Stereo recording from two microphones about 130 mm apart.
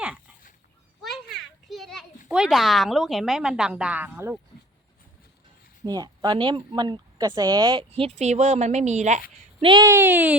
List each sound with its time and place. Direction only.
1.0 s a sound: centre (ahead or behind)
2.3 s a woman's voice: 5° right (ahead or behind)
5.8 s a woman's voice: 30° right (ahead or behind)
7.9 s a woman's voice: 50° right (ahead or behind)
9.6 s speech: 40° right (ahead or behind)
9.8 s speech: 20° right (ahead or behind)